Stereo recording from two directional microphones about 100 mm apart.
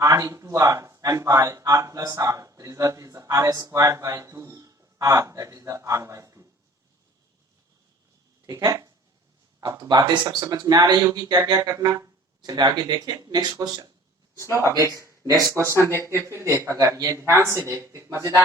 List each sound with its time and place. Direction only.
0.0 s speech: 30° right (ahead or behind)
8.4 s speech: 35° right (ahead or behind)
14.6 s speech: 30° left (ahead or behind)
14.9 s speech: 30° right (ahead or behind)
15.9 s speech: 25° left (ahead or behind)
16.2 s speech: 30° right (ahead or behind)